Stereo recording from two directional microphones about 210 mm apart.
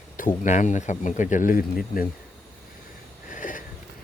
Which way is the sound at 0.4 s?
35° left (ahead or behind).